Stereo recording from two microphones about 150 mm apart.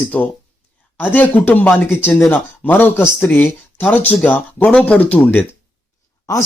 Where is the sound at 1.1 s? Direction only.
10° left (ahead or behind).